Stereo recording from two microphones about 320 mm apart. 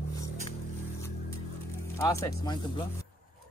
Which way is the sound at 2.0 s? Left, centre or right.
Centre.